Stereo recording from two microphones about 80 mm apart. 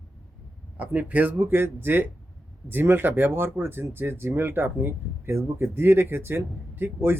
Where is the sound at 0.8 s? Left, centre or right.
Right.